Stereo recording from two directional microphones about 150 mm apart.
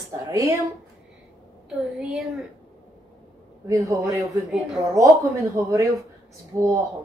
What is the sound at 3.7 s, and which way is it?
Speech, 20° right (ahead or behind).